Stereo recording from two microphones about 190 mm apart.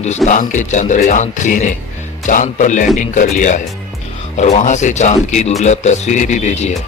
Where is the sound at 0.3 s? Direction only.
40° left (ahead or behind).